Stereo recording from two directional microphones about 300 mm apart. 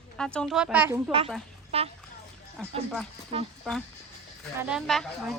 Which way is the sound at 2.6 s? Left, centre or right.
Centre.